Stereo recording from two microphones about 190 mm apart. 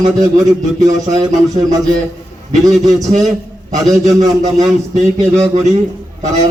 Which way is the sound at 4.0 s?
40° right (ahead or behind).